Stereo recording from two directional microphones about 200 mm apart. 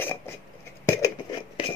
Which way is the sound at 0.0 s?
10° left (ahead or behind).